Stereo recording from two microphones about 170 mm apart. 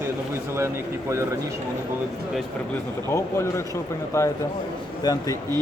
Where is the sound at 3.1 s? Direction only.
15° left (ahead or behind).